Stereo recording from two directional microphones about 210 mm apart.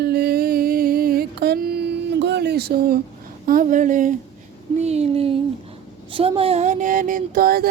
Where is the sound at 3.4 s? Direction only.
40° right (ahead or behind).